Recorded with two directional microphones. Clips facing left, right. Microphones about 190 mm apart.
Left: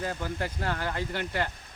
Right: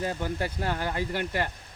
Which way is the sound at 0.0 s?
20° right (ahead or behind).